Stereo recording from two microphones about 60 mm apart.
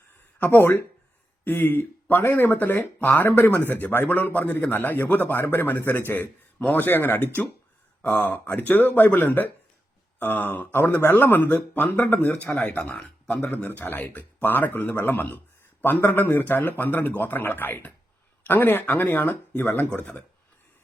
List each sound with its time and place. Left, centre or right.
0.3 s speech: left
12.8 s speech: centre
13.7 s speech: left
19.9 s speech: left